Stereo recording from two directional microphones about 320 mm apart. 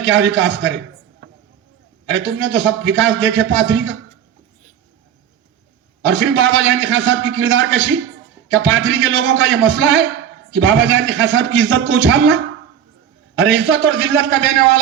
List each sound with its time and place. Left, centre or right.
0.0 s a man's voice: right
2.0 s a man's voice: right
6.1 s a man's voice: right
13.4 s a man's voice: right